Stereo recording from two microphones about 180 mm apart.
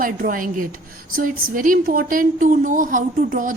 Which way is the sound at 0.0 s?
50° right (ahead or behind).